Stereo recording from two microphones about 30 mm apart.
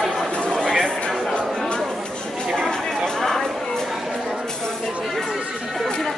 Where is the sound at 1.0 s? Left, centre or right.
Left.